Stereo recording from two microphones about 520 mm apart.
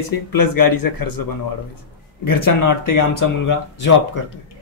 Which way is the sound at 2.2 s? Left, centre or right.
Left.